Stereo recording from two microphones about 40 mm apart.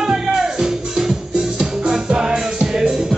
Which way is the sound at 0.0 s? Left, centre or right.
Centre.